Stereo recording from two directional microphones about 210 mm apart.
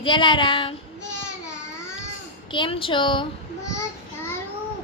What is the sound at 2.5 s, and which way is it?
Child singing, 25° left (ahead or behind).